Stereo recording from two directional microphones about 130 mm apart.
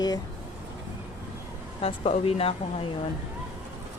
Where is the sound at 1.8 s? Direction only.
50° left (ahead or behind).